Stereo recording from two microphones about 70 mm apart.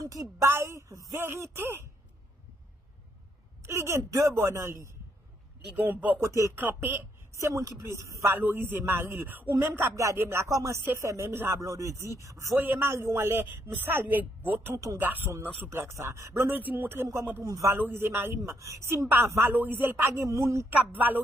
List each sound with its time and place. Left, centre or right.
0.0 s a man's voice: right
3.6 s speech: right
5.8 s speech: right
6.1 s a man's voice: right
7.3 s speech: right
8.4 s a man's voice: right
10.5 s speech: right
12.5 s a man's voice: right
16.4 s speech: right
17.4 s speech: right
17.7 s a man's voice: right
19.5 s speech: right
20.2 s speech: right
20.7 s speech: right